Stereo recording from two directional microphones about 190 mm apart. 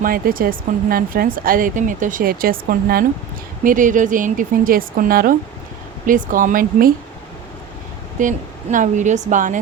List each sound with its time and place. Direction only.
0.0 s speech: 50° right (ahead or behind)
8.2 s speech: 40° right (ahead or behind)